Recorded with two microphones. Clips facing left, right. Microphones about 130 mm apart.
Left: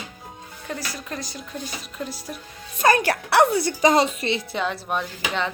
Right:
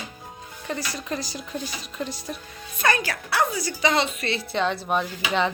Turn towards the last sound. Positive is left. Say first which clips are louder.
# right 3 dB
turn(degrees=0)  # may be behind; listen again after turning